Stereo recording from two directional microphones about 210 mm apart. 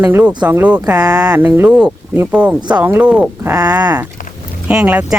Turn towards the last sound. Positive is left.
turn(degrees=-10)  # may be behind; listen again after turning